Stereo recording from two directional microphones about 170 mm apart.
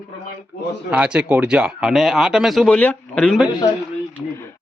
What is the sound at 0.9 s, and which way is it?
Speech, 5° right (ahead or behind).